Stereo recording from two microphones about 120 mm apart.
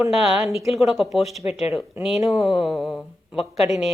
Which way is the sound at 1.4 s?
60° left (ahead or behind).